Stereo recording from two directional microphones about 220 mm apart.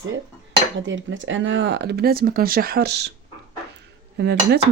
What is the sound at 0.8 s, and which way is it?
Speech, 55° right (ahead or behind).